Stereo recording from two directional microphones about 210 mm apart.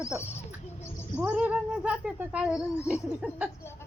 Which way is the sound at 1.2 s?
5° right (ahead or behind).